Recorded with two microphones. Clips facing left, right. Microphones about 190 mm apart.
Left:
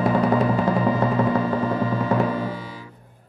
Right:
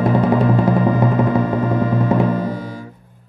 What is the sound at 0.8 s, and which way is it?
Music, 15° right (ahead or behind).